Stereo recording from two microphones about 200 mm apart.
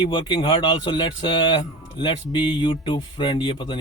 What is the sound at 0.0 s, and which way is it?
Speech, 25° left (ahead or behind).